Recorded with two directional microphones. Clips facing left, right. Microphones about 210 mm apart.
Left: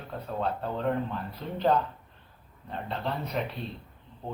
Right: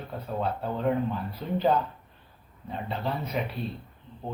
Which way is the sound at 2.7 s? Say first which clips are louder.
Right 2 dB; 5° right (ahead or behind).